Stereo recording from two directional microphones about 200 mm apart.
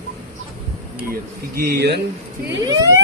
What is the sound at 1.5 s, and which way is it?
Speech, 55° right (ahead or behind).